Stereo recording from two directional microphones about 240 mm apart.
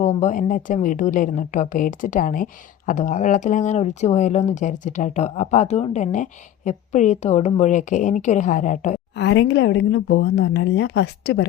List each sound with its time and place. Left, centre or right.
0.0 s a woman's voice: left
9.1 s speech: left